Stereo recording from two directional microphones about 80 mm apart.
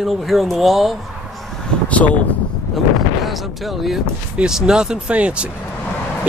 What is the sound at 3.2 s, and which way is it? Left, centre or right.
Speech, centre.